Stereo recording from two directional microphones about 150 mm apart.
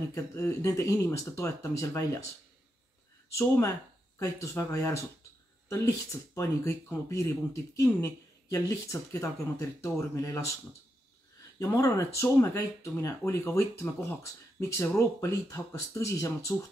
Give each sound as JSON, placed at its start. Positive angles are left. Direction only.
{"t": 0.1, "sound": "speech", "side_deg": 20}
{"t": 3.3, "sound": "speech", "side_deg": 20}
{"t": 11.6, "sound": "speech", "side_deg": 20}